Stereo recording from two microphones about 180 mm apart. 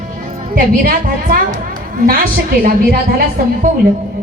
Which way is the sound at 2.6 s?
55° right (ahead or behind).